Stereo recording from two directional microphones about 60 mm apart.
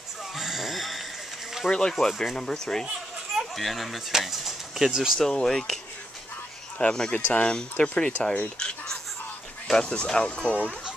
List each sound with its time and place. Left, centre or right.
0.4 s a sound: centre
1.7 s speech: centre
5.2 s speech: centre
6.8 s speech: centre